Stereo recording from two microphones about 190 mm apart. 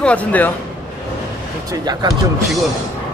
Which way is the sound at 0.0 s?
5° left (ahead or behind).